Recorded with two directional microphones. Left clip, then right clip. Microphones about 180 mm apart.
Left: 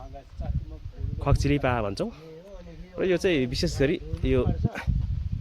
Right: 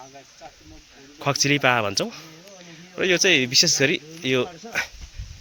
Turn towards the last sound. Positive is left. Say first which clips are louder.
# right 4 dB
turn(degrees=5)  # may be behind; listen again after turning